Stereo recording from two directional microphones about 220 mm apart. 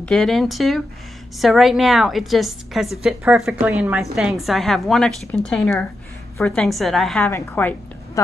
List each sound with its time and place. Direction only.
0.0 s a woman's voice: centre (ahead or behind)